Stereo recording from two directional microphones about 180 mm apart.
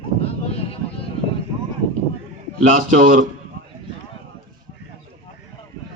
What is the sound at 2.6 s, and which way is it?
Speech, 45° right (ahead or behind).